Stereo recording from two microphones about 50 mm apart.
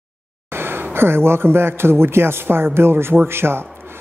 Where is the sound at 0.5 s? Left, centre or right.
Right.